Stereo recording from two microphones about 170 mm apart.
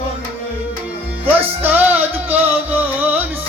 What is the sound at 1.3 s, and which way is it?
Music, 10° right (ahead or behind).